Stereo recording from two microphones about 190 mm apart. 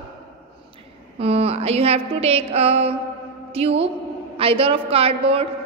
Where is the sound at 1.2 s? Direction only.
30° right (ahead or behind).